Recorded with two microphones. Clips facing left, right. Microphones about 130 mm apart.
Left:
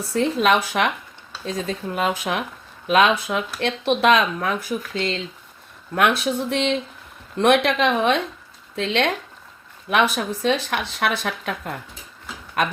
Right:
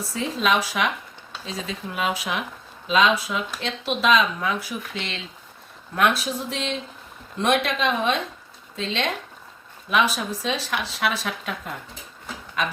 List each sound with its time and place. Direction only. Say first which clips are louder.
0.1 s speech: left 5 dB; 60° left (ahead or behind)
1.5 s speech: left 6 dB; 45° left (ahead or behind)
6.2 s speech: left 6 dB; 60° left (ahead or behind)